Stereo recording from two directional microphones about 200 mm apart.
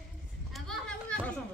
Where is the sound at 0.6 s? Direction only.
5° left (ahead or behind).